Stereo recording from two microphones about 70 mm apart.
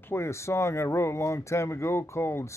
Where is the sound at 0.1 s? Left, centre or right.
Left.